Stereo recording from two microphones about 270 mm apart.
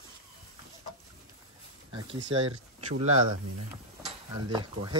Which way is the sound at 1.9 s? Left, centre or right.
Centre.